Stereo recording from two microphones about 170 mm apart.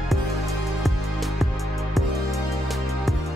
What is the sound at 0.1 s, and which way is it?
Music, centre (ahead or behind).